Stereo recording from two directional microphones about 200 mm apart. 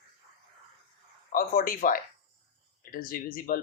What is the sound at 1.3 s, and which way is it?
Speech, 45° left (ahead or behind).